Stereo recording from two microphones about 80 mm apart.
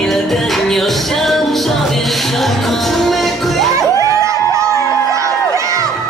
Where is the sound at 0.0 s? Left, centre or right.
Centre.